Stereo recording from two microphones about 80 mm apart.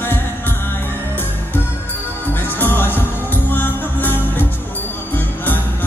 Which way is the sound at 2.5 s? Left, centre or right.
Left.